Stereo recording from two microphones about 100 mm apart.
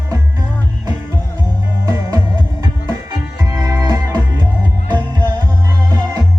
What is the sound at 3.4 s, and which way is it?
Music, 35° right (ahead or behind).